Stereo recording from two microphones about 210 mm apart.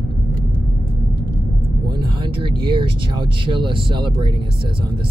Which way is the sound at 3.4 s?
25° right (ahead or behind).